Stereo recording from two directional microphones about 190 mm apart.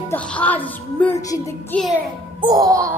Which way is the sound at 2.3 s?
20° right (ahead or behind).